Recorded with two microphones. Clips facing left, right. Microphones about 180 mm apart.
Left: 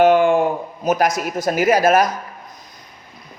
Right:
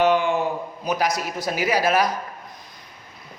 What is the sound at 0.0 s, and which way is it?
Speech, 50° left (ahead or behind).